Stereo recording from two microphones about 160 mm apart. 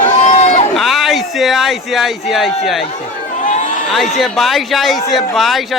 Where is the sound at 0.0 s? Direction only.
45° left (ahead or behind).